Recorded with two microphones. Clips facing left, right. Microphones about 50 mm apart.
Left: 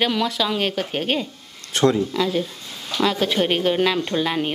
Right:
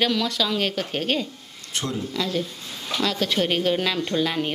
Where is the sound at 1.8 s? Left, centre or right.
Left.